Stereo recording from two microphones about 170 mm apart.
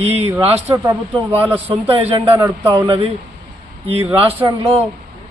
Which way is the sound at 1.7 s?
35° right (ahead or behind).